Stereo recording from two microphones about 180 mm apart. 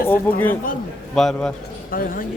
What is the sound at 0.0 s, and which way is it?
Speech, 10° left (ahead or behind).